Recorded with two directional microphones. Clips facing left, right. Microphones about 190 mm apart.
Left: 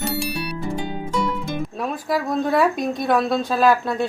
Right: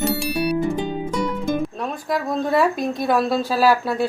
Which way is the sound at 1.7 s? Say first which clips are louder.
Left 1 dB; centre (ahead or behind).